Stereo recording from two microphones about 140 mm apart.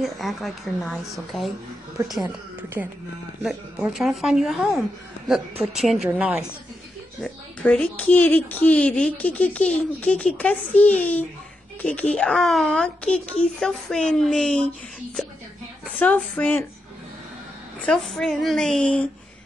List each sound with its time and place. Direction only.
0.0 s a child's voice: centre (ahead or behind)
2.2 s a woman's voice: 15° right (ahead or behind)
3.4 s a child's voice: centre (ahead or behind)
7.2 s a child's voice: 10° left (ahead or behind)
16.0 s speech: 10° left (ahead or behind)
17.8 s a child's voice: 5° left (ahead or behind)